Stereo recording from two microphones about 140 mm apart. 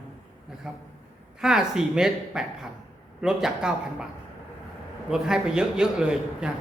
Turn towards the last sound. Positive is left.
turn(degrees=-5)  # may be behind; listen again after turning